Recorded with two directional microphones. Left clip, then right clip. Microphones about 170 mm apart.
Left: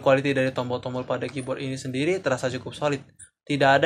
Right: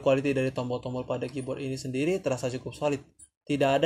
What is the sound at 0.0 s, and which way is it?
Speech, 40° right (ahead or behind).